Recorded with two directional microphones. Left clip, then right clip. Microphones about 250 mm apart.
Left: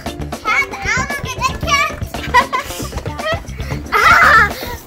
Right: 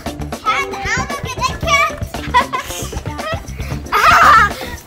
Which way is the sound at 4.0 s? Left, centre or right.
Right.